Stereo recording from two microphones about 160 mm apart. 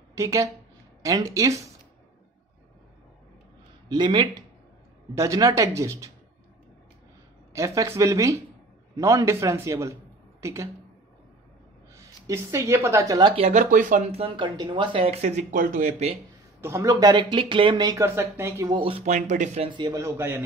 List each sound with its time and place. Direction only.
0.1 s speech: 20° right (ahead or behind)
3.9 s speech: 30° right (ahead or behind)
7.5 s speech: 20° right (ahead or behind)
11.9 s a woman's voice: 20° right (ahead or behind)
13.4 s speech: 50° right (ahead or behind)
14.1 s speech: 35° right (ahead or behind); by 15.9 s 60° right (ahead or behind)
16.6 s speech: 20° right (ahead or behind)
18.0 s a man's voice: 15° right (ahead or behind)
18.7 s speech: 35° right (ahead or behind)
19.0 s speech: 50° right (ahead or behind)
19.7 s a man's voice: 25° right (ahead or behind)